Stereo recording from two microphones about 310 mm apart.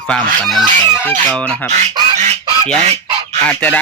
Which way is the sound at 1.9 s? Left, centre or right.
Centre.